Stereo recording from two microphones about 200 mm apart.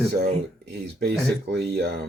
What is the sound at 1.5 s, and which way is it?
Speech, 55° right (ahead or behind).